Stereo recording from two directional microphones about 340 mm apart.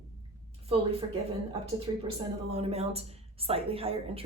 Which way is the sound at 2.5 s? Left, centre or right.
Centre.